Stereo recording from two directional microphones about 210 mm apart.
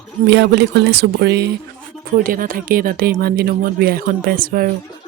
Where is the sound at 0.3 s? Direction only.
55° right (ahead or behind).